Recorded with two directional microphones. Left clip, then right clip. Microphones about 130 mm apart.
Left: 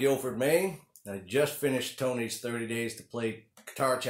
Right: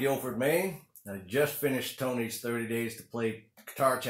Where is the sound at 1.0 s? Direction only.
10° left (ahead or behind).